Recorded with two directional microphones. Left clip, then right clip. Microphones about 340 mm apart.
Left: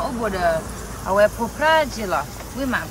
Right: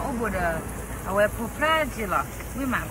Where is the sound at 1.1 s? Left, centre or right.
Left.